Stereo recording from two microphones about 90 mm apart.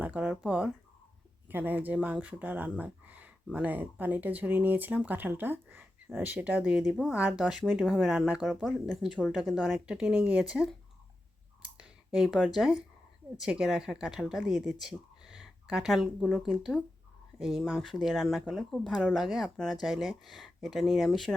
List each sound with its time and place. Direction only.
0.0 s speech: 15° right (ahead or behind); by 9.4 s 5° left (ahead or behind)
9.6 s speech: 5° right (ahead or behind)
11.6 s clicking: 10° right (ahead or behind)
12.5 s speech: 5° right (ahead or behind)